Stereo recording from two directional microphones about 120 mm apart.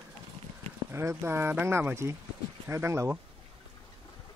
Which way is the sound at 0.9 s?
20° right (ahead or behind).